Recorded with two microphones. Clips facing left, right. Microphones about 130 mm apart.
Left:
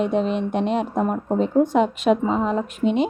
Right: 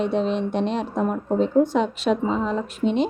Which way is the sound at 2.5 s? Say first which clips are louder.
Left 2 dB; 5° left (ahead or behind).